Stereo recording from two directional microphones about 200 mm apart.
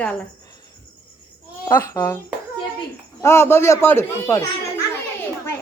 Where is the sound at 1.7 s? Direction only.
10° left (ahead or behind).